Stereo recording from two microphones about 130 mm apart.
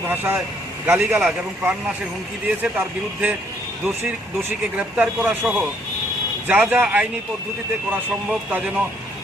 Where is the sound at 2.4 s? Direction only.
10° right (ahead or behind).